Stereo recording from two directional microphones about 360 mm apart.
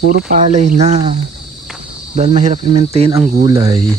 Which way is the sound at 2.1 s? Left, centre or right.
Centre.